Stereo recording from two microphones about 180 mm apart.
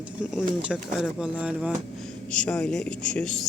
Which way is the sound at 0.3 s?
5° right (ahead or behind).